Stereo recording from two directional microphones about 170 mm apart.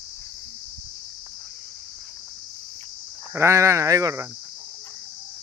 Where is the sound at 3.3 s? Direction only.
15° right (ahead or behind).